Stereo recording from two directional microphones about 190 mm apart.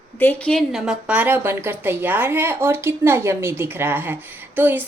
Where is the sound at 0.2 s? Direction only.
5° left (ahead or behind).